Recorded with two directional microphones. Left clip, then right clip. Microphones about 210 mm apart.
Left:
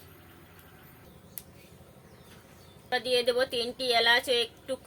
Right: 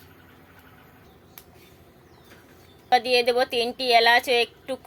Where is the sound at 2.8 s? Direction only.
20° right (ahead or behind).